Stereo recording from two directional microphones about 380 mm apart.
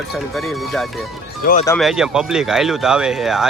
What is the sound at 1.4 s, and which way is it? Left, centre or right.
Speech, left.